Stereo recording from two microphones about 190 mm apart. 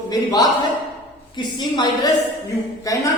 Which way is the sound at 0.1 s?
20° left (ahead or behind).